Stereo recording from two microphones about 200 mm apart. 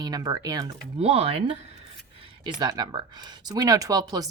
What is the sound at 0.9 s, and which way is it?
Speech, 30° right (ahead or behind).